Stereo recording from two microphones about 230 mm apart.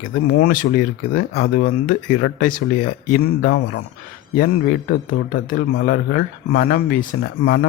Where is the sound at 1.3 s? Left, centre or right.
Left.